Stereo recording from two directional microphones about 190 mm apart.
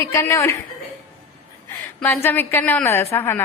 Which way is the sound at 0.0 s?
15° left (ahead or behind).